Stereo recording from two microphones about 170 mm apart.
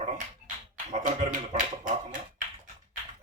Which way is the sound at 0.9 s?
45° right (ahead or behind).